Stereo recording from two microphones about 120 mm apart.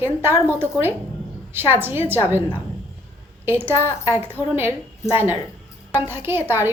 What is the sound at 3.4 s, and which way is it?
A woman's voice, 20° right (ahead or behind).